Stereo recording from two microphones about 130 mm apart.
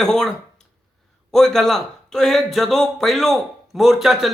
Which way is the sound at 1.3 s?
5° left (ahead or behind).